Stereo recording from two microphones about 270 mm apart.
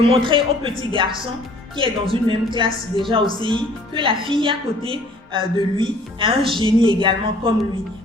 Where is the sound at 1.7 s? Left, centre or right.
Centre.